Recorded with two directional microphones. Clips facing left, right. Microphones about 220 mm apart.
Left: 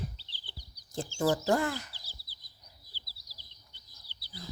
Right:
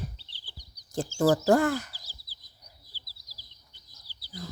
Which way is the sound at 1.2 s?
40° right (ahead or behind).